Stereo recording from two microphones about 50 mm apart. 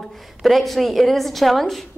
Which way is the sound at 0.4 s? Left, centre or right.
Centre.